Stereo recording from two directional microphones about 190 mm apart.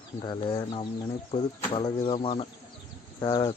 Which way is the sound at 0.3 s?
25° left (ahead or behind).